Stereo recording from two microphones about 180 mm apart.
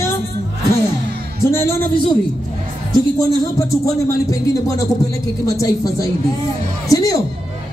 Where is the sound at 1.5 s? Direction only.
15° left (ahead or behind).